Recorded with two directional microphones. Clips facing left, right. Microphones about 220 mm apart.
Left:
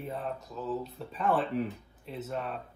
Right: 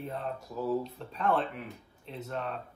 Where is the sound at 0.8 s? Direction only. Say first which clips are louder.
Even; 5° left (ahead or behind).